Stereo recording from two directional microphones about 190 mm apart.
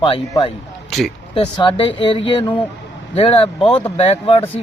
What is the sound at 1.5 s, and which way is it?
Speech, 25° left (ahead or behind).